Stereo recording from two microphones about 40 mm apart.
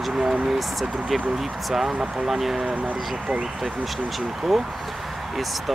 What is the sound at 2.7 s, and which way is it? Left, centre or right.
Speech, right.